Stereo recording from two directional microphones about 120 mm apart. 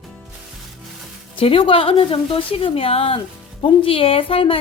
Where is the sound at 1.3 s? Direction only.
45° left (ahead or behind).